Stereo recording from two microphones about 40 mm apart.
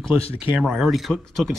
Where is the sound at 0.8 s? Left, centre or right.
Centre.